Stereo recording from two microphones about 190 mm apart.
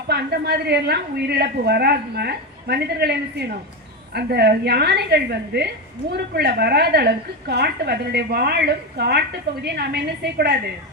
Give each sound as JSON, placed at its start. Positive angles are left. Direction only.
{"t": 0.1, "sound": "a woman's voice", "side_deg": -60}